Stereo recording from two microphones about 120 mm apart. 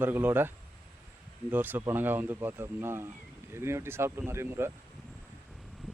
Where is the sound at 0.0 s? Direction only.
15° right (ahead or behind).